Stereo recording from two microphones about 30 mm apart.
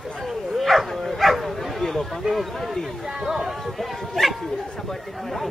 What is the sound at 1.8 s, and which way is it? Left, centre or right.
Speech, centre.